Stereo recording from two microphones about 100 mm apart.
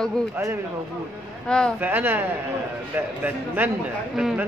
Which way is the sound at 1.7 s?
20° right (ahead or behind).